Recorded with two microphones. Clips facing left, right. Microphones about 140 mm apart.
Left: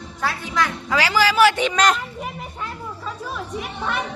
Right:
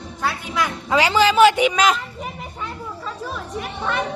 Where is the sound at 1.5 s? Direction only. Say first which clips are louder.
Right 2 dB; 10° right (ahead or behind).